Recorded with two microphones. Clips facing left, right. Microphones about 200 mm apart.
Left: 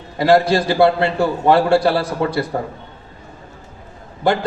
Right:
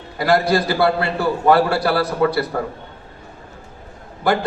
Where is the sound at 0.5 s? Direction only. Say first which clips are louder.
Left 3 dB; 25° left (ahead or behind).